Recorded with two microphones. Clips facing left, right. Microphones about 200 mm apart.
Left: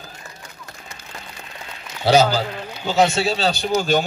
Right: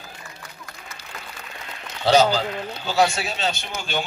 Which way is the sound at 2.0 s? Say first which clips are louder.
Left 1 dB; 10° left (ahead or behind).